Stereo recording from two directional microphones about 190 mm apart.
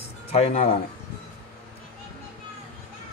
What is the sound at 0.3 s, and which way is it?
Speech, 30° left (ahead or behind).